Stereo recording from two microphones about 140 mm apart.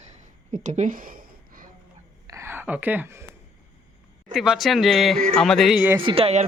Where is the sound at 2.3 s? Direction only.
20° right (ahead or behind).